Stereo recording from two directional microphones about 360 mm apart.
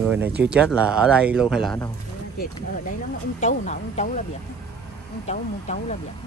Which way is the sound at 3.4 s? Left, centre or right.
Centre.